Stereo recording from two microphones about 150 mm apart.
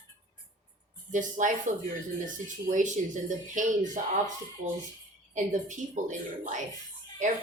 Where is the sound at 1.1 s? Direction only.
60° right (ahead or behind).